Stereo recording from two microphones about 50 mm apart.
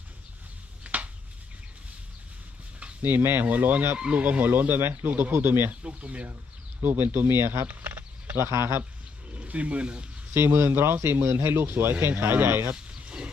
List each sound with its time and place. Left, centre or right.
0.9 s a sound: right
3.0 s speech: right
5.3 s speech: right
5.8 s speech: right
6.8 s speech: right
7.7 s a sound: right
8.4 s speech: right
9.3 s speech: right
10.3 s speech: right
13.0 s a sound: right